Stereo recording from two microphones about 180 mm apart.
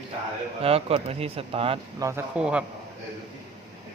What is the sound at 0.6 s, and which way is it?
Speech, 35° right (ahead or behind).